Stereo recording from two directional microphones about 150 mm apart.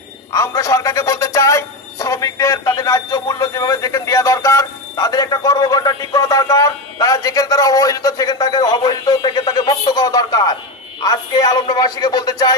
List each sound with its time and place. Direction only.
0.3 s speech: 20° left (ahead or behind)